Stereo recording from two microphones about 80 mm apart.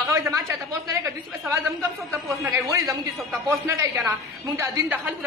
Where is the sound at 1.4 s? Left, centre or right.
Right.